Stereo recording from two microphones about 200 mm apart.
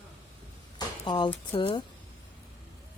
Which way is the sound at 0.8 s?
20° left (ahead or behind).